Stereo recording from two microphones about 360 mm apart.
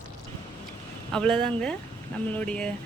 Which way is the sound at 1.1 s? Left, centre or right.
Centre.